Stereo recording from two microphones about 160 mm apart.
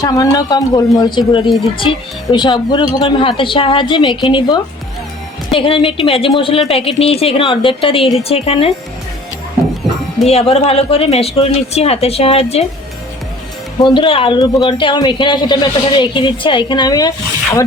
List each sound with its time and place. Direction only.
0.0 s speech: 25° left (ahead or behind)
10.2 s speech: 40° left (ahead or behind)
13.8 s speech: 30° left (ahead or behind)